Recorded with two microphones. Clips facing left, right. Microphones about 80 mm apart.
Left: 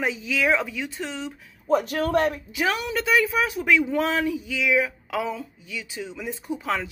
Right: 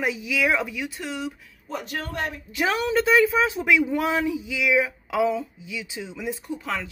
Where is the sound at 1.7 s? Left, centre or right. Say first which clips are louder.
Left 10 dB; left.